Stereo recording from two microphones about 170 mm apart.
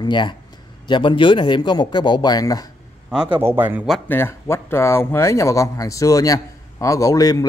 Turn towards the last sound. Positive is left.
turn(degrees=20)  # may be behind; listen again after turning